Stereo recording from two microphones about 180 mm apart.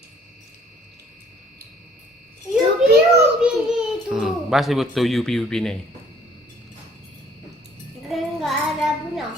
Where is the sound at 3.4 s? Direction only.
5° right (ahead or behind).